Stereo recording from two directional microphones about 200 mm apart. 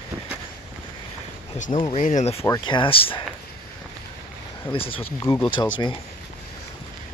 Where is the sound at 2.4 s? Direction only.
20° left (ahead or behind).